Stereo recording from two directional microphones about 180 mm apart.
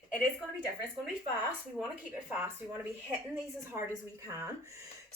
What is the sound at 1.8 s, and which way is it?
Speech, 10° right (ahead or behind).